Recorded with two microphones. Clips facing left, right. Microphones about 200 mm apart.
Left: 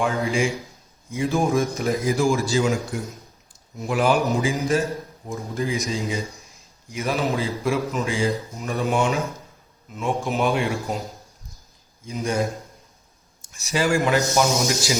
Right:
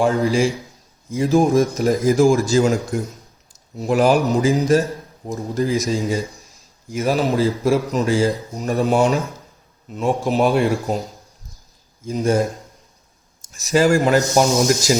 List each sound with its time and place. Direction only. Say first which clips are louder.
0.0 s speech: right 5 dB; 35° right (ahead or behind)
12.0 s speech: right 6 dB; 40° right (ahead or behind)